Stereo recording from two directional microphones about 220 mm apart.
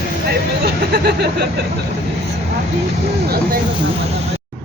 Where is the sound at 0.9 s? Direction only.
45° right (ahead or behind).